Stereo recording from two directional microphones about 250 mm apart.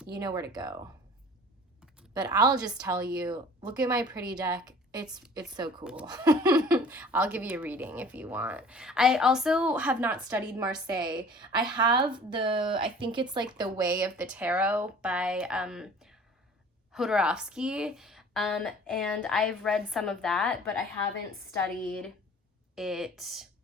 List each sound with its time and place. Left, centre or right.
0.1 s a woman's voice: centre
2.1 s a woman's voice: centre
5.8 s speech: centre
6.1 s speech: centre
10.9 s a woman's voice: centre
22.7 s speech: centre